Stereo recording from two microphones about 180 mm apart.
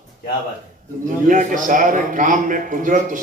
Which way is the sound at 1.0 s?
45° right (ahead or behind).